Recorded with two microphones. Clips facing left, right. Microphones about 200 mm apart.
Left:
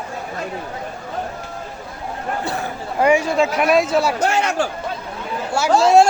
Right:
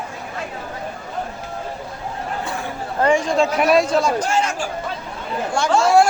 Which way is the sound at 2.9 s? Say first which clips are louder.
Left 1 dB; 10° left (ahead or behind).